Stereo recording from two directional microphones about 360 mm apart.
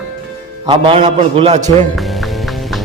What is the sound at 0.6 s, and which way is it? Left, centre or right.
A man's voice, centre.